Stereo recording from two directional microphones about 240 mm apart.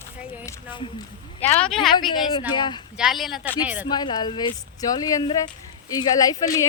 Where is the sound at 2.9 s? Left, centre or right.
Centre.